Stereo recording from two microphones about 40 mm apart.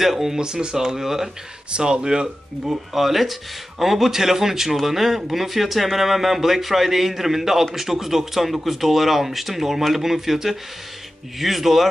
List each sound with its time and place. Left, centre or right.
0.0 s speech: centre
1.7 s speech: right
2.7 s a man's voice: centre